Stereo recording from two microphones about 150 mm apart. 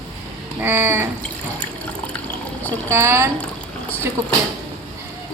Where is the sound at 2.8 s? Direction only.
15° right (ahead or behind).